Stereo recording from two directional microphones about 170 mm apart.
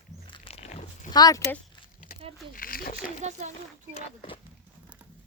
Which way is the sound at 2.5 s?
60° left (ahead or behind).